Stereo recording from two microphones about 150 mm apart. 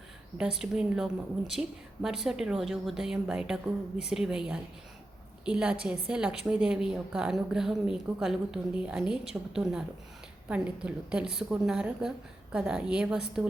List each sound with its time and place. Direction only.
0.3 s a woman's voice: 5° right (ahead or behind)